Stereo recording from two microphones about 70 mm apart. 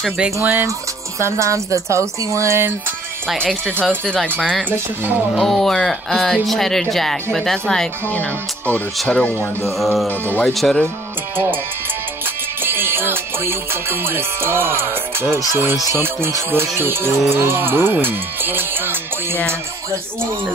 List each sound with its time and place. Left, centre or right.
0.4 s speech: right
1.2 s speech: right
4.4 s speech: centre
5.3 s speech: centre
8.1 s speech: left
9.7 s speech: centre
10.0 s speech: left
10.5 s speech: centre
12.6 s music: right
16.0 s speech: right